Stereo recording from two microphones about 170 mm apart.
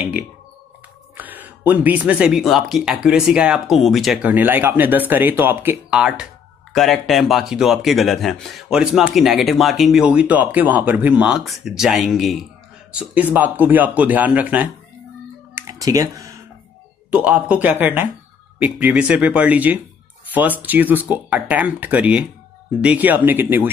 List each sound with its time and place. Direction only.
1.1 s speech: 10° right (ahead or behind)
15.5 s computer keyboard: 20° right (ahead or behind)
17.1 s speech: 10° right (ahead or behind)